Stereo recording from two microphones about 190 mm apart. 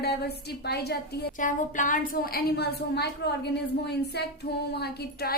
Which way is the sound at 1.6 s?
40° left (ahead or behind).